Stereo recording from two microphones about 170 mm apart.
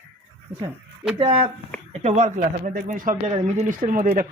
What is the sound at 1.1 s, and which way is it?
Speech, 35° right (ahead or behind).